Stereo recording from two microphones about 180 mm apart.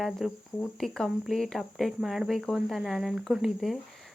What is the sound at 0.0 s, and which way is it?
Speech, centre (ahead or behind).